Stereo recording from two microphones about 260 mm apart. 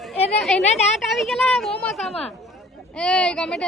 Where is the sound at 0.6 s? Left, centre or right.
Left.